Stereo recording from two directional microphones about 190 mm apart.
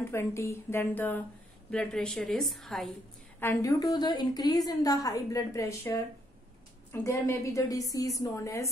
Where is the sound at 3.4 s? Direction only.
15° left (ahead or behind).